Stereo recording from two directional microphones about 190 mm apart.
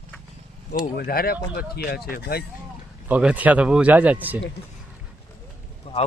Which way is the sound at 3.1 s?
5° right (ahead or behind).